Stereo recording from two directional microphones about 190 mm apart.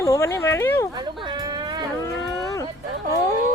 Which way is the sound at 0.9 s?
20° right (ahead or behind).